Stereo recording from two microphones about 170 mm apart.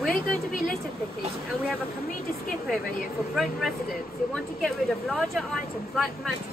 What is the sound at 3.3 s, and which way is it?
Speech, centre (ahead or behind).